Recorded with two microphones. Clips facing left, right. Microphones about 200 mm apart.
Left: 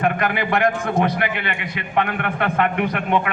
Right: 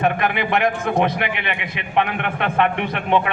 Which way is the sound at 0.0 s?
20° right (ahead or behind).